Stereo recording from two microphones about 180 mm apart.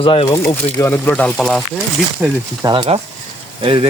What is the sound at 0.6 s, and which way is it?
Speech, 15° left (ahead or behind).